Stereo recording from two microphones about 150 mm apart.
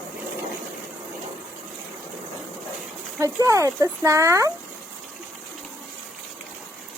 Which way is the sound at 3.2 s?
20° right (ahead or behind).